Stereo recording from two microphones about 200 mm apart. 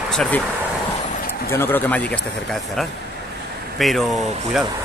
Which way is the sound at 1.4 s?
10° left (ahead or behind).